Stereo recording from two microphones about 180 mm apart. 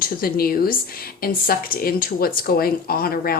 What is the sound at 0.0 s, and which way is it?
Speech, 55° left (ahead or behind).